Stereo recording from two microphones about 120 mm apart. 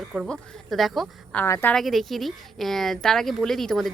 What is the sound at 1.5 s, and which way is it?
Speech, 20° left (ahead or behind).